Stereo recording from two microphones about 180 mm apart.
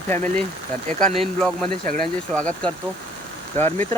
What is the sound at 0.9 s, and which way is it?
Speech, 45° right (ahead or behind).